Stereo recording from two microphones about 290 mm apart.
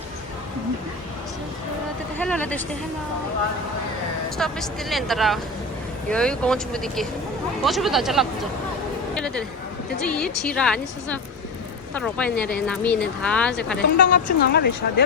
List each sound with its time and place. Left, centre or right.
2.1 s speech: centre
4.4 s speech: centre
14.0 s a woman's voice: left